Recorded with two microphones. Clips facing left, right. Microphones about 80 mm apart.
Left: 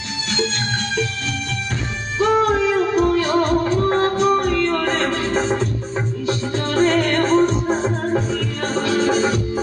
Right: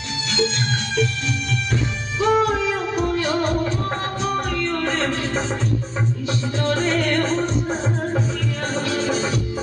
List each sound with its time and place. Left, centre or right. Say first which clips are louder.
2.1 s music: left 2 dB; left